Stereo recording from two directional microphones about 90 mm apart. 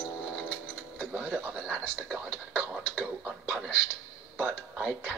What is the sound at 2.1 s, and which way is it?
Speech, 15° right (ahead or behind).